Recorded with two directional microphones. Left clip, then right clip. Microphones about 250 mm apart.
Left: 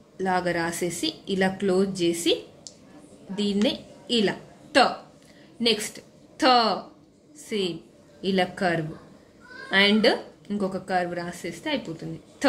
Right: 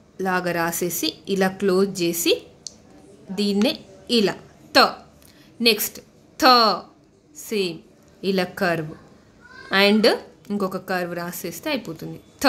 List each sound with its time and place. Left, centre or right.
0.2 s a woman's voice: right